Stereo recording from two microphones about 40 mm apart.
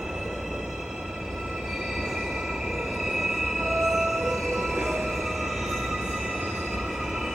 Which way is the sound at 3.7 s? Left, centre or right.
Centre.